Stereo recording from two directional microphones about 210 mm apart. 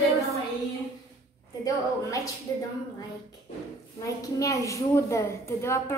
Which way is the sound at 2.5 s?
15° left (ahead or behind).